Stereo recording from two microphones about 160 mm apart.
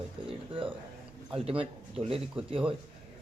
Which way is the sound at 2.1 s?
35° right (ahead or behind).